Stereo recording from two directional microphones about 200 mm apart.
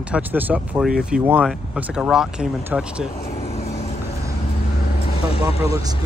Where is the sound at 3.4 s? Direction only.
30° left (ahead or behind).